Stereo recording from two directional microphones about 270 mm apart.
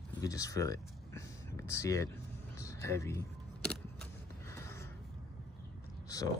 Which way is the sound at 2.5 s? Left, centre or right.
Centre.